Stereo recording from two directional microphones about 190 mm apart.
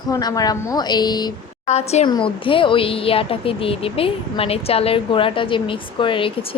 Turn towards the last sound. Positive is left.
turn(degrees=25)  # may be behind; listen again after turning